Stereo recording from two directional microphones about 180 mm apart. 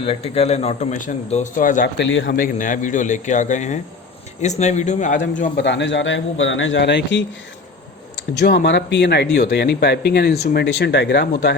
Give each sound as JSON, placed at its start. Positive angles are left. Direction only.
{"t": 0.0, "sound": "a man's voice", "side_deg": 35}
{"t": 2.0, "sound": "a man's voice", "side_deg": 90}
{"t": 2.4, "sound": "a man's voice", "side_deg": 45}
{"t": 5.5, "sound": "a man's voice", "side_deg": 80}
{"t": 8.4, "sound": "speech", "side_deg": 70}